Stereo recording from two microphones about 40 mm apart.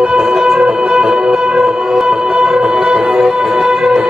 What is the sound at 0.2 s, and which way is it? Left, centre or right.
Music, centre.